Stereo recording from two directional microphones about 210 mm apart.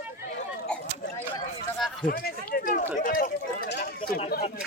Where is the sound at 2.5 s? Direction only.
40° left (ahead or behind).